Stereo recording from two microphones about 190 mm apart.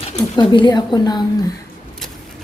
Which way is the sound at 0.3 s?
25° left (ahead or behind).